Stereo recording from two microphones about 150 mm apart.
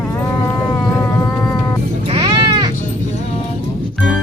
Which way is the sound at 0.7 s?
20° left (ahead or behind).